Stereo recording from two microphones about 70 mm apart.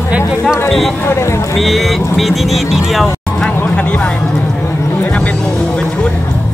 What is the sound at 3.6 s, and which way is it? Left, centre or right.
Music, left.